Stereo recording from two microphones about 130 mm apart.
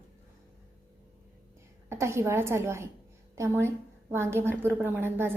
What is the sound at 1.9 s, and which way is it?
A woman's voice, 20° right (ahead or behind).